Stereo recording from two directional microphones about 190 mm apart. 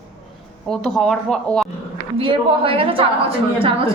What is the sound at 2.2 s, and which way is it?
A woman's voice, 30° right (ahead or behind).